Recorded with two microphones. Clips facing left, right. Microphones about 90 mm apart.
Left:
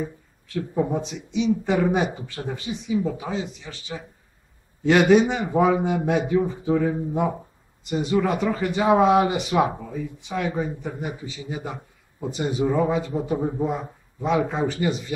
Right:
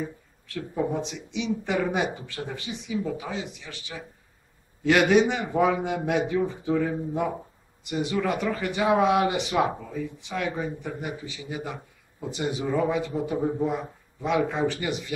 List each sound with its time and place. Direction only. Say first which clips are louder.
0.0 s speech: left 3 dB; 15° left (ahead or behind)
4.8 s a man's voice: left 3 dB; 5° left (ahead or behind)
13.7 s a man's voice: left 1 dB; 5° left (ahead or behind)
14.3 s speech: left 1 dB; 15° left (ahead or behind)